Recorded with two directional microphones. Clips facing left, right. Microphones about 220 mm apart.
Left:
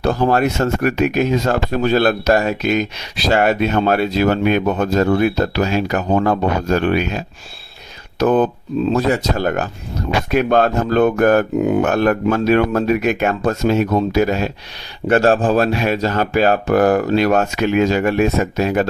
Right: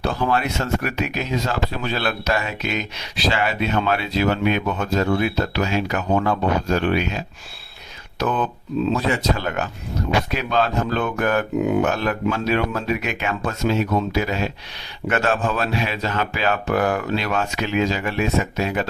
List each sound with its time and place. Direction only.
0.0 s speech: 45° left (ahead or behind)
8.2 s speech: 40° left (ahead or behind)